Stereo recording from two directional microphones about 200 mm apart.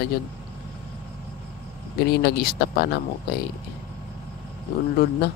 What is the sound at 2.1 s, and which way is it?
Speech, 50° left (ahead or behind).